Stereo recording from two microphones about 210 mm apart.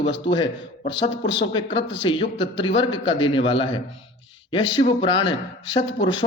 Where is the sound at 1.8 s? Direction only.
60° left (ahead or behind).